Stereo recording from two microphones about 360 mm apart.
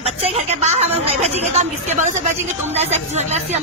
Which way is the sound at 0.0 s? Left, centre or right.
Centre.